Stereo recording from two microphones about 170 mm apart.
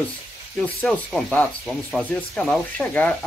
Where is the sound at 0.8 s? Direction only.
5° left (ahead or behind).